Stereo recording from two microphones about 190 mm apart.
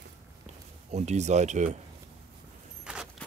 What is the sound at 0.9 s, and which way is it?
Speech, 35° right (ahead or behind).